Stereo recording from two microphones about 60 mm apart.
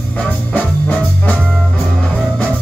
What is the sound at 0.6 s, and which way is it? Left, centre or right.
Music, left.